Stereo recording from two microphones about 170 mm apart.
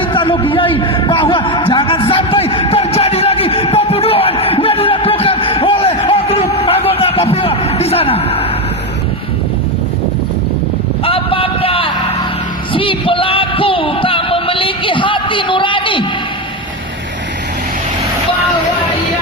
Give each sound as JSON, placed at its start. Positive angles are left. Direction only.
{"t": 0.0, "sound": "a sound", "side_deg": 30}
{"t": 11.0, "sound": "vehicle", "side_deg": 35}
{"t": 12.7, "sound": "music", "side_deg": 30}